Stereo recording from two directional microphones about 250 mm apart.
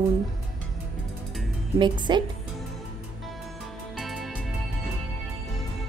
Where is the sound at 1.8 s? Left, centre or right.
Centre.